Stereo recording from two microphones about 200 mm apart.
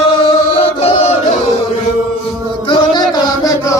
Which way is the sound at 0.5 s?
30° left (ahead or behind).